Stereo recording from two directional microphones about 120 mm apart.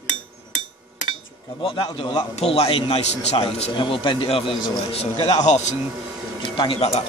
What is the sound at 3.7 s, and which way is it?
Speech, 40° left (ahead or behind).